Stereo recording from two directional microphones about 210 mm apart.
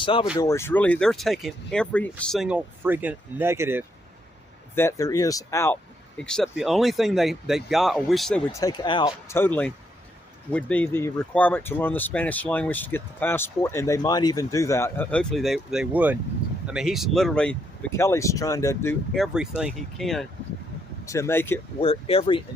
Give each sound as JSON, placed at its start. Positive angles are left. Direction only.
{"t": 0.0, "sound": "speech", "side_deg": 25}
{"t": 0.3, "sound": "speech", "side_deg": 15}
{"t": 4.7, "sound": "speech", "side_deg": 10}
{"t": 8.5, "sound": "speech", "side_deg": 20}
{"t": 19.2, "sound": "speech", "side_deg": -5}
{"t": 21.1, "sound": "speech", "side_deg": 10}
{"t": 21.8, "sound": "speech", "side_deg": 25}